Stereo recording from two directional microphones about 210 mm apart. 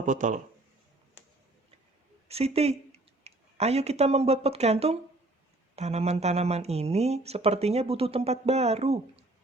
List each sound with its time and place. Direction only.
0.0 s speech: 35° right (ahead or behind)
2.2 s speech: 30° right (ahead or behind)